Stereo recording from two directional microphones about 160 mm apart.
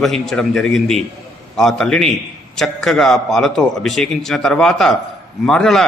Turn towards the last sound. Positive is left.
turn(degrees=5)  # may be behind; listen again after turning